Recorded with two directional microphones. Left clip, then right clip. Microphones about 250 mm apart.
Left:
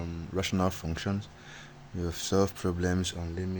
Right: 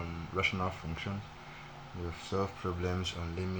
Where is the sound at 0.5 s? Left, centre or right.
Left.